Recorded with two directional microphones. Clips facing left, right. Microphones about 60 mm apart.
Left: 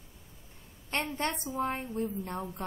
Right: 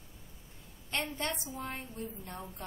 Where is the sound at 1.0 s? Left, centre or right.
Left.